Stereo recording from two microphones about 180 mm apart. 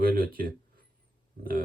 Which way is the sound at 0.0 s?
55° right (ahead or behind).